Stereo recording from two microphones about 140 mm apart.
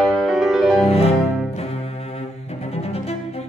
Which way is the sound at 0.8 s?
45° left (ahead or behind).